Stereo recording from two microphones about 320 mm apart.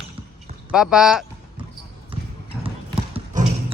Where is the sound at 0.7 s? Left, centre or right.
Centre.